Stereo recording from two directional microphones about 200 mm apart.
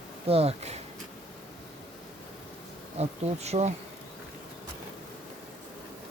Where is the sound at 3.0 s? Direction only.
35° right (ahead or behind).